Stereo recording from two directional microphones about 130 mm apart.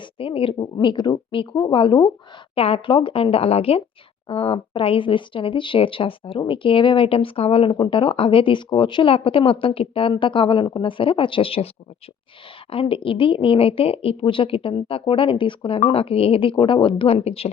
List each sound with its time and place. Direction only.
0.0 s speech: 45° left (ahead or behind)
12.7 s speech: 45° left (ahead or behind)